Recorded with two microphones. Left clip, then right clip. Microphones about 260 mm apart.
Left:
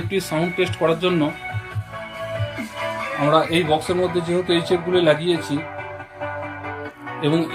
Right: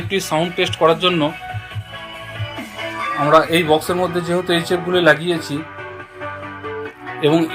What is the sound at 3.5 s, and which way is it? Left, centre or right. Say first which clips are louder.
A man's voice: right 4 dB; centre.